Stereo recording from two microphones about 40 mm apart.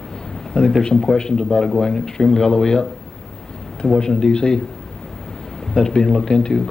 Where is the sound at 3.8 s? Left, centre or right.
Centre.